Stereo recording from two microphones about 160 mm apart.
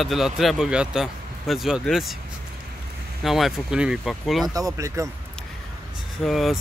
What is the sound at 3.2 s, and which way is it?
Speech, centre (ahead or behind).